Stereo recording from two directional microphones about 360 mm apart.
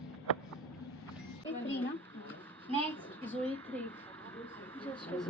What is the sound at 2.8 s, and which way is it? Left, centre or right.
A woman's voice, centre.